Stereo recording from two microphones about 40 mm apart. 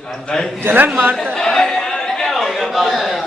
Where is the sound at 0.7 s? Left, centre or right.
Right.